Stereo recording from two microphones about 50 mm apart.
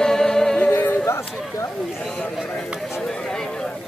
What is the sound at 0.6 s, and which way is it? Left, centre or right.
Music, left.